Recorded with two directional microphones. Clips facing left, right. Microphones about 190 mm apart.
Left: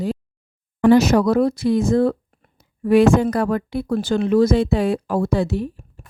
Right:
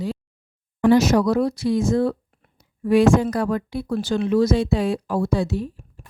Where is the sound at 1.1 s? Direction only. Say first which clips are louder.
Left 2 dB; 55° left (ahead or behind).